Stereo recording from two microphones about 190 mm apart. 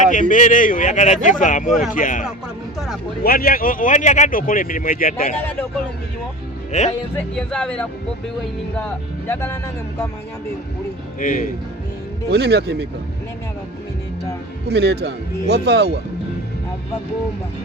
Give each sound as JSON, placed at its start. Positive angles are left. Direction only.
{"t": 0.0, "sound": "speech", "side_deg": 45}
{"t": 2.7, "sound": "speech", "side_deg": 0}
{"t": 3.2, "sound": "speech", "side_deg": 50}
{"t": 6.7, "sound": "speech", "side_deg": 35}
{"t": 7.3, "sound": "speech", "side_deg": 5}
{"t": 11.2, "sound": "speech", "side_deg": 45}
{"t": 12.3, "sound": "speech", "side_deg": -60}
{"t": 14.7, "sound": "speech", "side_deg": -60}